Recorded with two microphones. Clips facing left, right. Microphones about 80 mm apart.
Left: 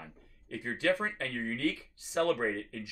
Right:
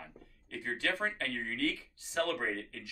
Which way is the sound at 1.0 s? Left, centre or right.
Centre.